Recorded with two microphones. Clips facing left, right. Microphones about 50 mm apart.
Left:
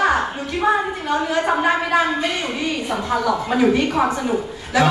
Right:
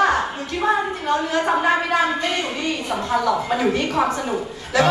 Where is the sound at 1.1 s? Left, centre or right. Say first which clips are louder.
Even; centre.